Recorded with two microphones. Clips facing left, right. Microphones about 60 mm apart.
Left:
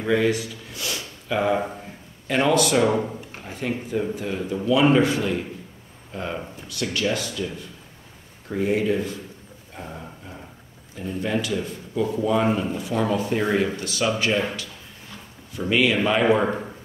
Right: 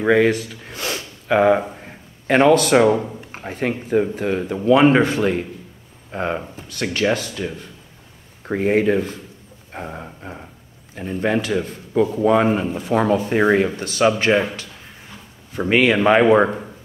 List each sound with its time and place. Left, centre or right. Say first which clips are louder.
0.0 s speech: right 5 dB; right
1.8 s a sound: right 1 dB; right
3.0 s speech: left 1 dB; centre
3.4 s speech: right 5 dB; right
9.7 s a sound: right 5 dB; right
11.0 s speech: right 5 dB; right
15.7 s speech: right 6 dB; right